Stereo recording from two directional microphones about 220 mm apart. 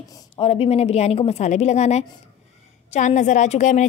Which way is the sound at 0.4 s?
25° left (ahead or behind).